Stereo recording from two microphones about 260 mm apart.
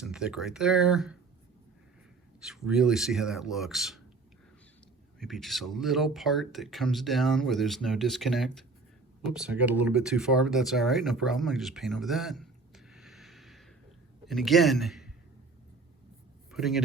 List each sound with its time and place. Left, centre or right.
0.0 s speech: centre
2.4 s speech: centre
5.2 s speech: centre
16.5 s speech: centre